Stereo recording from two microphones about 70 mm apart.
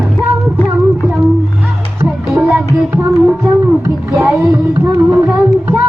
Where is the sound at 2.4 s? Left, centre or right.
Centre.